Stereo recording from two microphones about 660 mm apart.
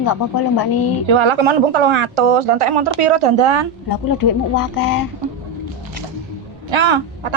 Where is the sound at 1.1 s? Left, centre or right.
Right.